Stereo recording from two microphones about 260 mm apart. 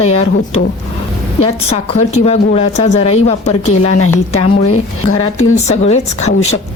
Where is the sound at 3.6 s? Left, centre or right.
Left.